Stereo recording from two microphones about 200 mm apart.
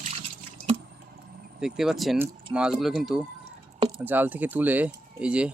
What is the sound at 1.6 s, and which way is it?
Speech, 5° right (ahead or behind).